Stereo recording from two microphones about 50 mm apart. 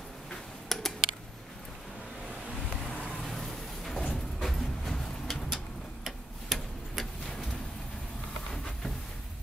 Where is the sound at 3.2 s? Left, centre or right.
Centre.